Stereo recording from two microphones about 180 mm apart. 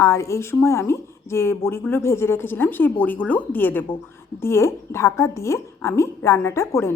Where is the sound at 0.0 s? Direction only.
15° left (ahead or behind).